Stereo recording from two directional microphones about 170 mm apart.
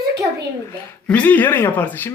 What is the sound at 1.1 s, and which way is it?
Speech, 10° left (ahead or behind).